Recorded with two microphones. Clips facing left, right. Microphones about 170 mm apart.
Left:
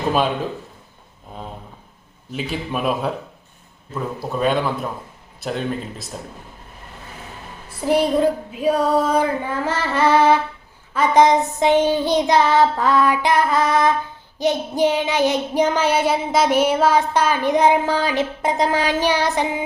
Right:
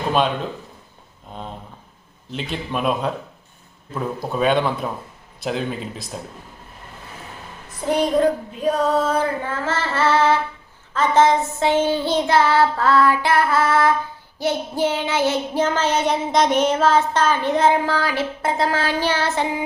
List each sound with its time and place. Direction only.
2.3 s child singing: 5° left (ahead or behind)
4.4 s speech: centre (ahead or behind)
7.7 s a woman's voice: 5° left (ahead or behind)
8.6 s child singing: 10° left (ahead or behind)